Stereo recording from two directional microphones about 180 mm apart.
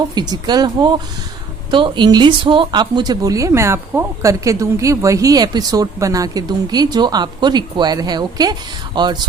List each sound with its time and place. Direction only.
0.1 s speech: 25° right (ahead or behind)